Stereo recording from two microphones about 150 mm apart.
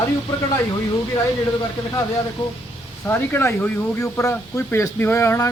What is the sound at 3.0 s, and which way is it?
A man's voice, 15° left (ahead or behind).